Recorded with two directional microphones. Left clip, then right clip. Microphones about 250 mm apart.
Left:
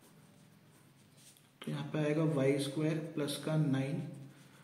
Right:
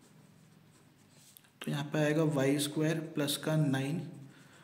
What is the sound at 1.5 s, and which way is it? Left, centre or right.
A man's voice, right.